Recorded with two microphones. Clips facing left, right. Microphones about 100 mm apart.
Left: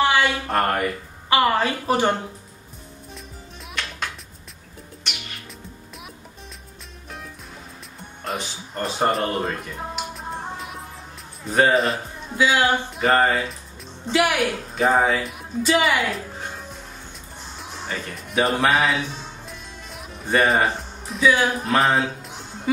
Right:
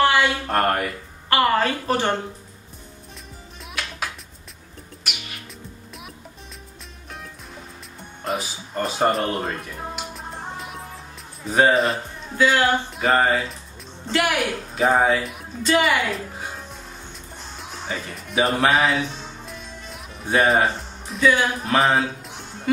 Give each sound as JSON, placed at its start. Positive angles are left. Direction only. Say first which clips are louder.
{"t": 0.0, "sound": "speech", "louder": "right 1 dB", "side_deg": 0}
{"t": 1.3, "sound": "a woman's voice", "louder": "even", "side_deg": 15}
{"t": 3.8, "sound": "music", "louder": "even", "side_deg": -5}
{"t": 5.1, "sound": "music", "louder": "right 1 dB", "side_deg": -5}
{"t": 8.2, "sound": "music", "louder": "right 2 dB", "side_deg": 0}
{"t": 11.4, "sound": "speech", "louder": "right 1 dB", "side_deg": 0}
{"t": 14.8, "sound": "speech", "louder": "right 1 dB", "side_deg": 0}